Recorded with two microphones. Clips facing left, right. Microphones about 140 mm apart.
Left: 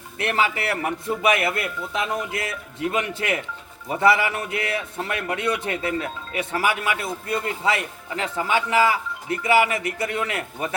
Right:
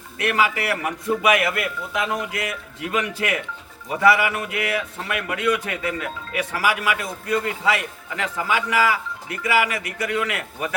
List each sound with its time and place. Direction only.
0.2 s a man's voice: 30° left (ahead or behind)